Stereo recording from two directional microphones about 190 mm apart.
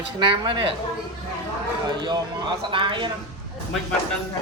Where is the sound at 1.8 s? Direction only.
20° right (ahead or behind).